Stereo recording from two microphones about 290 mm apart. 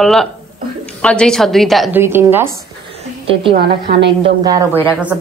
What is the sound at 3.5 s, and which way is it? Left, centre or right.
Speech, right.